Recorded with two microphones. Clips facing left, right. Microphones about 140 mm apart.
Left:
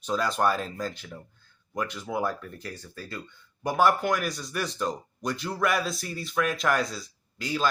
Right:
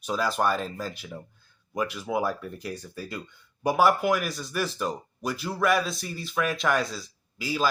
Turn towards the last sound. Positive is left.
turn(degrees=-5)  # may be behind; listen again after turning